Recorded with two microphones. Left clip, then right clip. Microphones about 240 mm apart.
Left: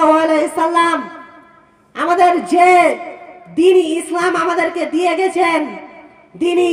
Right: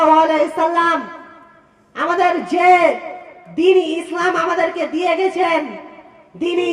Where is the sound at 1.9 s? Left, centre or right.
Left.